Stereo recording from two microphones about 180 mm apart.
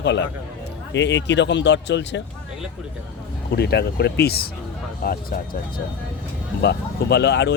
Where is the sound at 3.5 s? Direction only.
65° left (ahead or behind).